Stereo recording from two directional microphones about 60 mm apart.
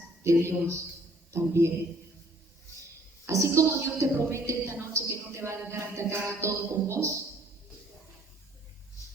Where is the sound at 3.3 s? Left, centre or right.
Right.